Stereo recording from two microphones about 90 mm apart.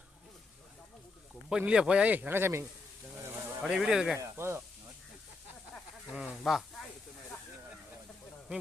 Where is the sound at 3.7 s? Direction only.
5° right (ahead or behind).